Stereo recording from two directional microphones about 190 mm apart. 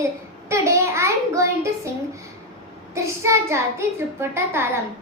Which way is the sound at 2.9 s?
15° right (ahead or behind).